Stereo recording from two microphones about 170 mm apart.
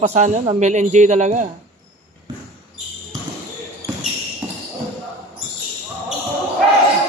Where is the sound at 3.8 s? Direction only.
65° right (ahead or behind).